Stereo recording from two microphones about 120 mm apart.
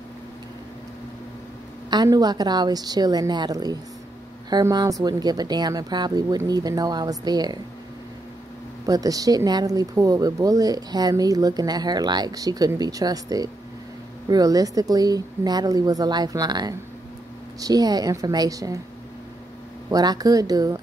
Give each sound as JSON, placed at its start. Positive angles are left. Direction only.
{"t": 1.9, "sound": "speech", "side_deg": -35}
{"t": 8.8, "sound": "speech", "side_deg": -30}
{"t": 19.9, "sound": "speech", "side_deg": -30}